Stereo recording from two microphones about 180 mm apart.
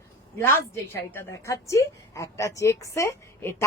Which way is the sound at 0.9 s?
15° left (ahead or behind).